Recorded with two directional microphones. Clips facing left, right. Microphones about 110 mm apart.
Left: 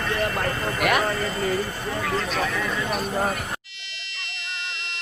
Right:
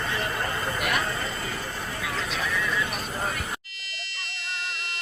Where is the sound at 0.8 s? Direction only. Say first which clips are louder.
Left 7 dB; 70° left (ahead or behind).